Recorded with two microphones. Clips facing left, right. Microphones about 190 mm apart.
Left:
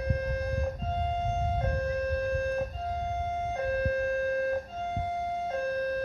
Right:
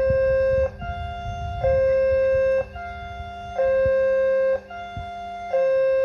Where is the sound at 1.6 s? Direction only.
65° right (ahead or behind).